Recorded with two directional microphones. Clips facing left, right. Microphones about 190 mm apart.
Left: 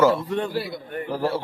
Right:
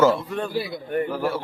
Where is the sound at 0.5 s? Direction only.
Centre (ahead or behind).